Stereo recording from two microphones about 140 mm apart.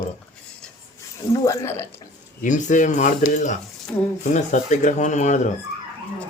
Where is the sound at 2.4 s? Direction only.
65° left (ahead or behind).